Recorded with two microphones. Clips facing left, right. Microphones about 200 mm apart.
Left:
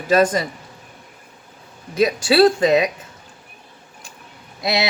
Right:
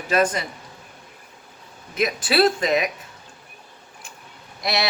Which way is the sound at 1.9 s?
30° left (ahead or behind).